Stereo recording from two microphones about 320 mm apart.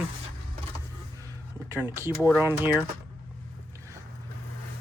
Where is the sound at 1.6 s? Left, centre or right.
Centre.